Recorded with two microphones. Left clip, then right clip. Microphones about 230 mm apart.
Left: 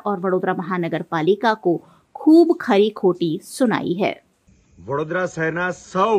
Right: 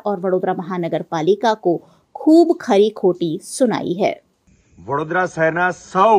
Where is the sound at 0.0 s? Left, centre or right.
Centre.